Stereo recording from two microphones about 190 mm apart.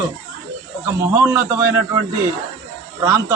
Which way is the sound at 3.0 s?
15° right (ahead or behind).